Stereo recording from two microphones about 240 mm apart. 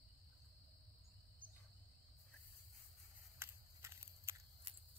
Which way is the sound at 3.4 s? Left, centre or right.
Centre.